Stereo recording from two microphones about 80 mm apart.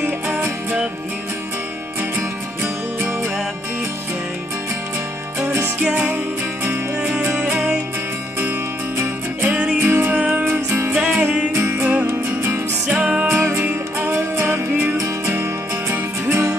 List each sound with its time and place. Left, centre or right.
2.0 s music: right
5.8 s music: centre
7.5 s music: centre
9.4 s music: centre
9.8 s music: right
10.1 s music: centre
10.4 s music: right
11.0 s music: centre
11.5 s music: right